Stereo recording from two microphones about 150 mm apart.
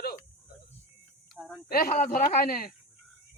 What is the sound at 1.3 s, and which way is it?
Speech, centre (ahead or behind).